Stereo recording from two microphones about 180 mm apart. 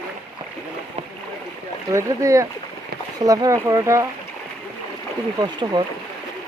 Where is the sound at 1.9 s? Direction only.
15° right (ahead or behind).